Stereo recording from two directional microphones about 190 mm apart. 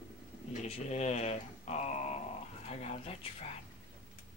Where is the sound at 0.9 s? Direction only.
35° left (ahead or behind).